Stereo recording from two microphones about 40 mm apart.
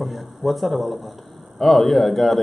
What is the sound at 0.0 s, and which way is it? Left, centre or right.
Speech, centre.